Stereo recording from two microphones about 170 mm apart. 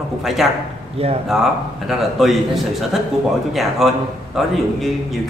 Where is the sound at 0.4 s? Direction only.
Centre (ahead or behind).